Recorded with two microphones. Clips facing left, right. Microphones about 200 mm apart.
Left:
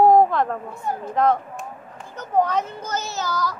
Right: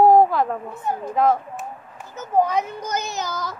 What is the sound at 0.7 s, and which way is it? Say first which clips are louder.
Speech: right 1 dB; 20° right (ahead or behind).